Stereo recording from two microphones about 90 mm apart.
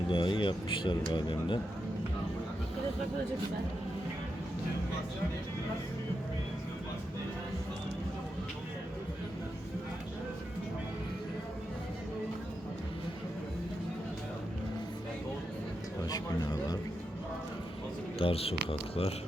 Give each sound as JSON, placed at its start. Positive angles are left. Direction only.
{"t": 0.1, "sound": "speech", "side_deg": 65}
{"t": 16.0, "sound": "a man's voice", "side_deg": 45}
{"t": 18.2, "sound": "speech", "side_deg": 90}